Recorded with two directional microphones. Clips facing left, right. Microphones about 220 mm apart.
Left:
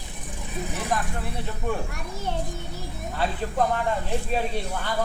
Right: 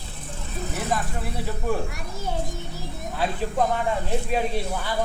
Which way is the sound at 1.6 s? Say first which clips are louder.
Right 2 dB; 5° right (ahead or behind).